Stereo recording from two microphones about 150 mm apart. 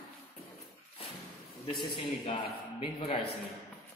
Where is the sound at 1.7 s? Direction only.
30° left (ahead or behind).